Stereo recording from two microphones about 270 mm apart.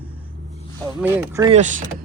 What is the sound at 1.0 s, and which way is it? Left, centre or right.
Speech, centre.